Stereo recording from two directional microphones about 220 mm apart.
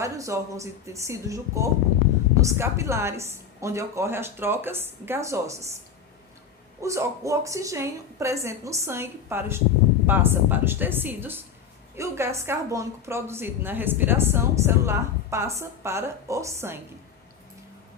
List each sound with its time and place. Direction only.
0.0 s a woman's voice: 15° right (ahead or behind)
6.8 s a woman's voice: 15° right (ahead or behind)